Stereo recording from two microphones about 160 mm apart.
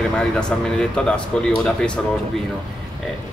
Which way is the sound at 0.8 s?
5° left (ahead or behind).